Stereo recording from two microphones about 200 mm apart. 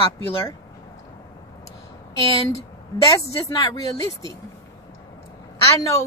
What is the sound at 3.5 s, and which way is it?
Speech, 20° left (ahead or behind).